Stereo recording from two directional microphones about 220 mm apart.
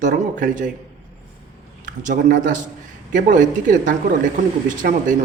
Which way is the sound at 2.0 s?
35° right (ahead or behind).